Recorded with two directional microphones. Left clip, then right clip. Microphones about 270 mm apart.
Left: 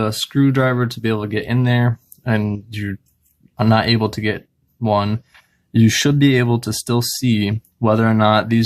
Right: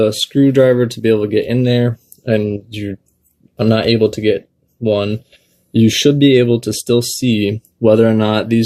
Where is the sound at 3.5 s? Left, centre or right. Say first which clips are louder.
Right 3 dB; left.